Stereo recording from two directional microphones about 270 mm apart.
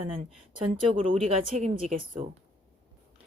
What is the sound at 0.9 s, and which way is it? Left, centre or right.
A woman's voice, centre.